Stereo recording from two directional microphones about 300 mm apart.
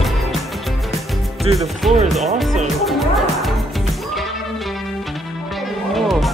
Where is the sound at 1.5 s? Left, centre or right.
Centre.